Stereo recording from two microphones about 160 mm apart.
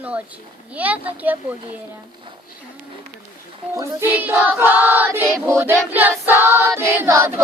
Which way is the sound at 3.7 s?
15° right (ahead or behind).